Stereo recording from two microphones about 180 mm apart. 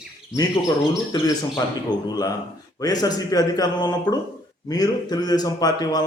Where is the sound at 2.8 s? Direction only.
20° left (ahead or behind).